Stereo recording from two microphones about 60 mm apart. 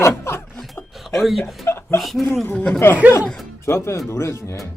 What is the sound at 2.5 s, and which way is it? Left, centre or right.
Speech, left.